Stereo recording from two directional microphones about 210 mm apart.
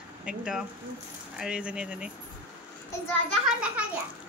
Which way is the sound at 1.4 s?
5° right (ahead or behind).